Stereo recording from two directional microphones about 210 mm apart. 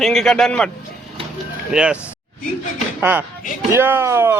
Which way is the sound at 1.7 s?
5° right (ahead or behind).